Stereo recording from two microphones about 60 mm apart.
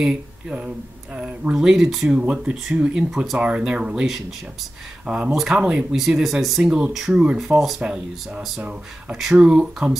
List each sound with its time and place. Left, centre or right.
0.0 s speech: centre
2.0 s speech: right
2.9 s speech: centre
5.0 s speech: centre
5.3 s speech: centre
7.8 s speech: centre
8.4 s speech: centre